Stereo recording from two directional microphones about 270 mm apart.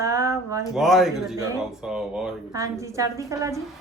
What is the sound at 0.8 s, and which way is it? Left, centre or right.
A woman's voice, centre.